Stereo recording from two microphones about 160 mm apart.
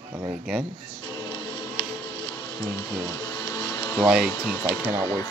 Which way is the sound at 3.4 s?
25° left (ahead or behind).